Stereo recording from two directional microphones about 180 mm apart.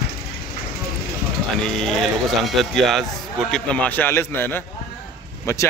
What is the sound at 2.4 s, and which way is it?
A man's voice, centre (ahead or behind).